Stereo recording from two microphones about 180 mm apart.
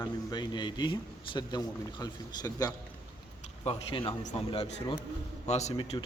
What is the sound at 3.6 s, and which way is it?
A man's voice, 30° left (ahead or behind).